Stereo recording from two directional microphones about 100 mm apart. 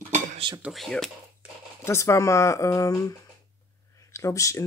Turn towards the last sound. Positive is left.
turn(degrees=30)  # may be behind; listen again after turning